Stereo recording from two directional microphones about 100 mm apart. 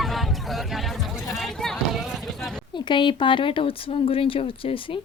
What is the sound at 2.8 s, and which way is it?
Speech, 50° left (ahead or behind).